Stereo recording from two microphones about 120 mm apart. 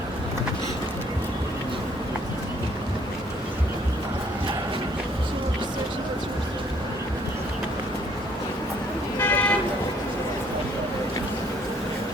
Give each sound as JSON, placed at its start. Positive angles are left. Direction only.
{"t": 9.1, "sound": "vehicle", "side_deg": 15}